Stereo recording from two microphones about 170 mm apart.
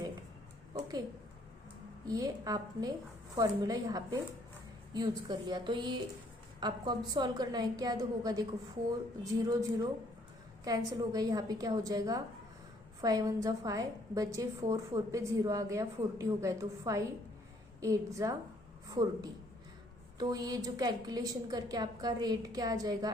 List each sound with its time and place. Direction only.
0.7 s a sound: 25° right (ahead or behind)
2.0 s a woman's voice: 20° right (ahead or behind)
20.1 s a woman's voice: 20° right (ahead or behind)